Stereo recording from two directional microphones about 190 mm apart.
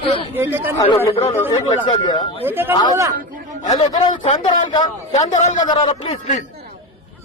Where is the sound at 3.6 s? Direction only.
25° left (ahead or behind).